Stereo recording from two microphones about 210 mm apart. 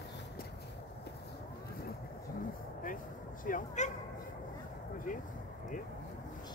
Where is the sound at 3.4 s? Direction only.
35° left (ahead or behind).